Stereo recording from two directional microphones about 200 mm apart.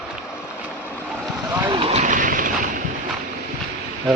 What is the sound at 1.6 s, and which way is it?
Vehicle, 25° right (ahead or behind).